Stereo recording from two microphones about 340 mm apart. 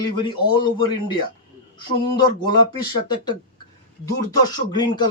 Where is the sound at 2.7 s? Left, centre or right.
Centre.